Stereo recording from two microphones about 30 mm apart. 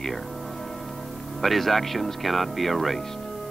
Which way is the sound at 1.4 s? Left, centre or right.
Centre.